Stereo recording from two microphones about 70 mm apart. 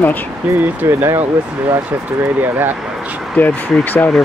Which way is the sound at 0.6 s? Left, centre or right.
Right.